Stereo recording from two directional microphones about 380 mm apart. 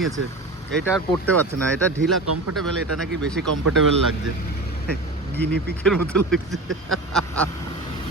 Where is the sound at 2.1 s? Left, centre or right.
Right.